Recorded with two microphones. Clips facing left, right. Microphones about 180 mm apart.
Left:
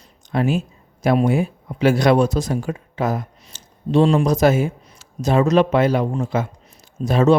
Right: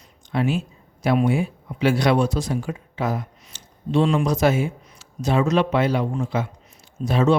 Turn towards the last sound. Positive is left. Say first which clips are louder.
# left 4 dB
turn(degrees=40)  # may be behind; listen again after turning